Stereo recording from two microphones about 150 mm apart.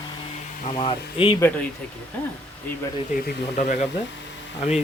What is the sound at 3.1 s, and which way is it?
Speech, 85° left.